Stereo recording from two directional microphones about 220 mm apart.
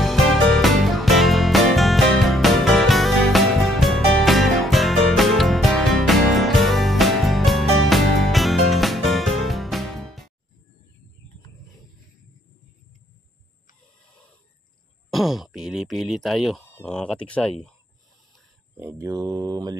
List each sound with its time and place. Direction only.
0.0 s music: centre (ahead or behind)
15.0 s speech: centre (ahead or behind)
18.8 s speech: 10° right (ahead or behind)